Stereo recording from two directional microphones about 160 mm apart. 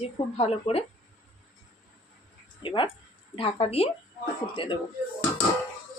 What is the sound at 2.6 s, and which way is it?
A woman's voice, 30° left (ahead or behind).